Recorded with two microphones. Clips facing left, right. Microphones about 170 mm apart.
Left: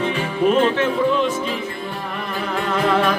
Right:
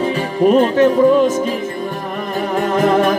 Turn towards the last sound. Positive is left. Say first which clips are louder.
# right 5 dB
turn(degrees=-45)  # may be behind; listen again after turning